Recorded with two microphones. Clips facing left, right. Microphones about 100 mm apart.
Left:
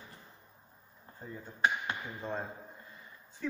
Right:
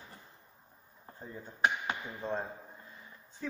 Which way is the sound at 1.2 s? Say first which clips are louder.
Even; 15° right (ahead or behind).